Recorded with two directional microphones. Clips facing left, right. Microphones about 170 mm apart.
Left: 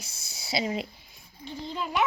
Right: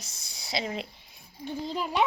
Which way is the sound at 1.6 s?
35° right (ahead or behind).